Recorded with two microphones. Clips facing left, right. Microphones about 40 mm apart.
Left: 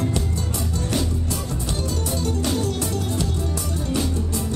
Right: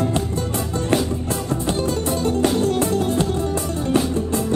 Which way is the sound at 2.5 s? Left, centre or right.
Right.